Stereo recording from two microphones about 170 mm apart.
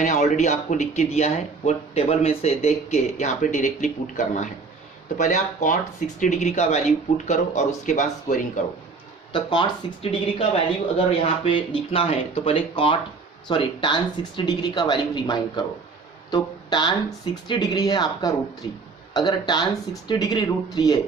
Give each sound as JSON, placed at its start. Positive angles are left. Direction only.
{"t": 0.0, "sound": "speech", "side_deg": 45}
{"t": 9.3, "sound": "speech", "side_deg": 30}